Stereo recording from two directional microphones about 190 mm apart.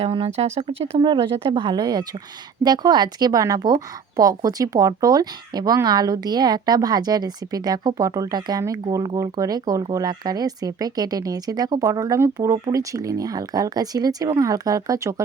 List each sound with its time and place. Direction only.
0.0 s a woman's voice: 30° right (ahead or behind)